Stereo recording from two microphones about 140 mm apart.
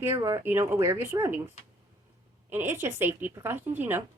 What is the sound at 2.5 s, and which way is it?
Speech, 20° right (ahead or behind).